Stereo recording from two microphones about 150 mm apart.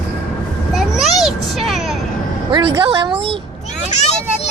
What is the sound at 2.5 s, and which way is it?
Speech, 30° right (ahead or behind).